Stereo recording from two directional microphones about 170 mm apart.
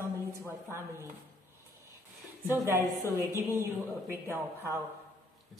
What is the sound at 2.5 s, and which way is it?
A woman's voice, 15° right (ahead or behind).